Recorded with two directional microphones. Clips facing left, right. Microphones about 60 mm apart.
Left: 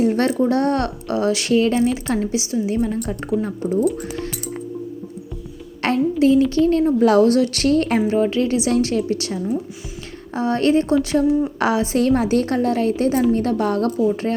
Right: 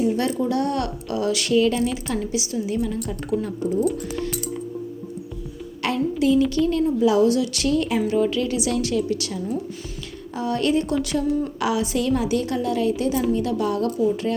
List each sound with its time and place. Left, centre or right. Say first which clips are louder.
0.0 s speech: left 4 dB; left
5.8 s speech: left 5 dB; left
7.0 s a woman's voice: left 3 dB; left
8.0 s a woman's voice: left 3 dB; left